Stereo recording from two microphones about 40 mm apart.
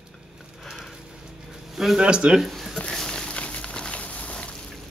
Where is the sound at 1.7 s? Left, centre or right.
Centre.